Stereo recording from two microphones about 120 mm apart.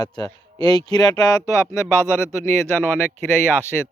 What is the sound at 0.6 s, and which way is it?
Speech, 35° left (ahead or behind).